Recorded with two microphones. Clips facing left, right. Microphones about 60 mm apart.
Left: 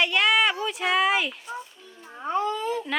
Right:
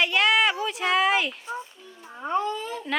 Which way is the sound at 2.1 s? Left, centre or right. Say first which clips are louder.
Even; centre.